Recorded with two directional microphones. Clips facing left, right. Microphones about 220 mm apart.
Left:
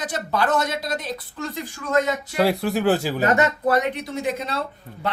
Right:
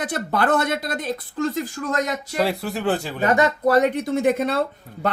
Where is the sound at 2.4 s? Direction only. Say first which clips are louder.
Left 3 dB; centre (ahead or behind).